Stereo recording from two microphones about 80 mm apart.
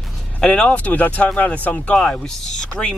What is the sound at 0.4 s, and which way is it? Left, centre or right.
Speech, centre.